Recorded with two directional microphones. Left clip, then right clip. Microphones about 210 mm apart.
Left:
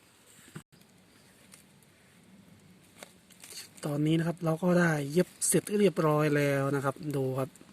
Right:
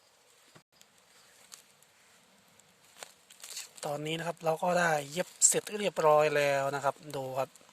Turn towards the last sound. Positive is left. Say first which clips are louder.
# left 2 dB
turn(degrees=-20)  # may be behind; listen again after turning